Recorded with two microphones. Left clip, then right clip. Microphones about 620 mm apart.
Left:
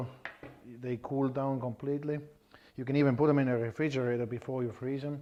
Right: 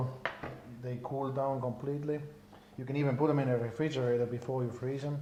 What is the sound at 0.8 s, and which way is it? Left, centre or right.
Speech, left.